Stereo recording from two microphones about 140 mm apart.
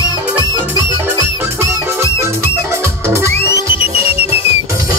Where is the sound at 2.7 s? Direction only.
20° right (ahead or behind).